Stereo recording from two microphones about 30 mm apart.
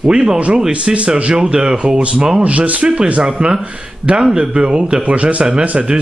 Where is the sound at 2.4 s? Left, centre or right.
Right.